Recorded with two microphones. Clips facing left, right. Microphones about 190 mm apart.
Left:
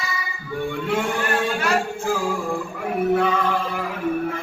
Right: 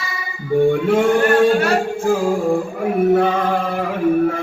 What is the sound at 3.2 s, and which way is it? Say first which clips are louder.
Chant: right 4 dB; 45° right (ahead or behind).